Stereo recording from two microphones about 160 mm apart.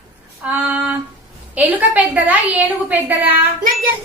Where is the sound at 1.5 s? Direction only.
10° right (ahead or behind).